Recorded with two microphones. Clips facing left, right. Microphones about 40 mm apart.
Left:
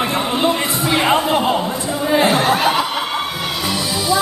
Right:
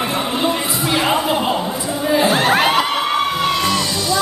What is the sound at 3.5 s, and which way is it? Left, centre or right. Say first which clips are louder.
Music: right 3 dB; centre.